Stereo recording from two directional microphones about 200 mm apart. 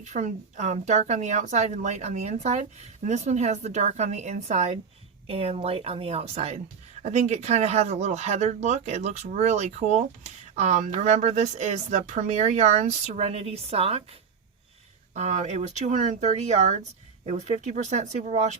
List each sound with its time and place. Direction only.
0.0 s speech: 35° right (ahead or behind)